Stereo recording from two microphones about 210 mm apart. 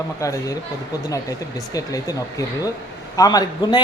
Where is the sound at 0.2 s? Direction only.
15° left (ahead or behind).